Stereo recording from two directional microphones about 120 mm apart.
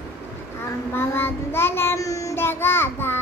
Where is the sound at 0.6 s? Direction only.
20° left (ahead or behind).